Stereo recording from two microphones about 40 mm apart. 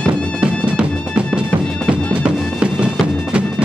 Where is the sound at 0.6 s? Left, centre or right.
Right.